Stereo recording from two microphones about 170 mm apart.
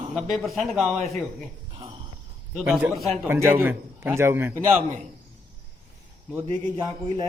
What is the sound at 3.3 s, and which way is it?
A man's voice, 15° right (ahead or behind).